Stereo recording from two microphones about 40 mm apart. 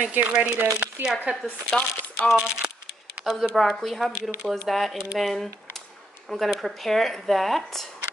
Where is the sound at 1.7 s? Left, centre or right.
Left.